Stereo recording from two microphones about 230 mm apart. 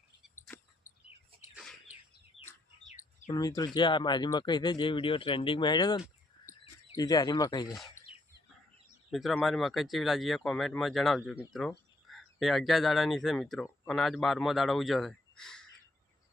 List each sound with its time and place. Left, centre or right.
0.9 s bird: left
1.3 s bird: right
2.4 s bird: left
3.2 s speech: centre
7.9 s bird: centre
9.0 s speech: centre